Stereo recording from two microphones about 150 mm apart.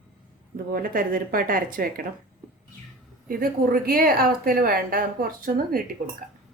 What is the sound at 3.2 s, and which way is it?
A woman's voice, 75° right (ahead or behind).